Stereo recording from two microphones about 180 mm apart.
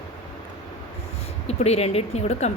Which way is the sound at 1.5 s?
35° left (ahead or behind).